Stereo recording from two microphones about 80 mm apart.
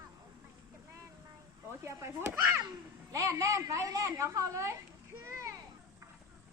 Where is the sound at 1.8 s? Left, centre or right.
Right.